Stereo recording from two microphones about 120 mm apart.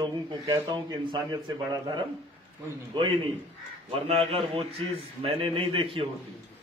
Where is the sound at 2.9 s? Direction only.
50° right (ahead or behind).